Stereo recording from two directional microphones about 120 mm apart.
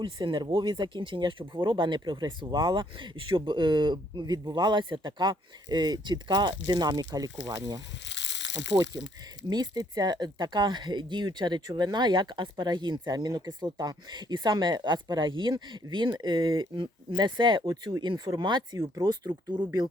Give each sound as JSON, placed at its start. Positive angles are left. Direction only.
{"t": 0.0, "sound": "speech", "side_deg": -40}
{"t": 8.7, "sound": "speech", "side_deg": -40}